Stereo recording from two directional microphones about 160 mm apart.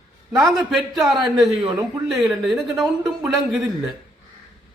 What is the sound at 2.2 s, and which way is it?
Speech, centre (ahead or behind).